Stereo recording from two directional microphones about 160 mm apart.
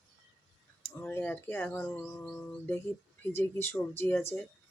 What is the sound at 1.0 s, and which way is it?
Speech, 15° left (ahead or behind).